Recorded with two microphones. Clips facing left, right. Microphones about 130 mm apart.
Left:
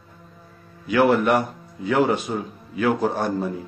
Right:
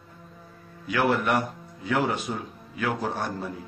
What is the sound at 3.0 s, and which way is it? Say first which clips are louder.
Speech: left 7 dB; 15° left (ahead or behind).